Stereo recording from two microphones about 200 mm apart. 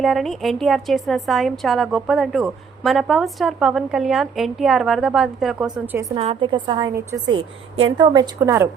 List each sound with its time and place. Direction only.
0.0 s a woman's voice: centre (ahead or behind)
6.1 s a woman's voice: 25° right (ahead or behind)